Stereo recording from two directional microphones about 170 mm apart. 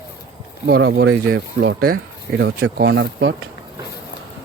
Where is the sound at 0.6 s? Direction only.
75° right (ahead or behind).